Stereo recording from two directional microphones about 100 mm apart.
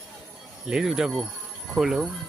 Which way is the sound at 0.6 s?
5° right (ahead or behind).